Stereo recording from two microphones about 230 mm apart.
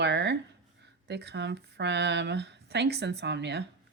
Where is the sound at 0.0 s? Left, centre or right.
Right.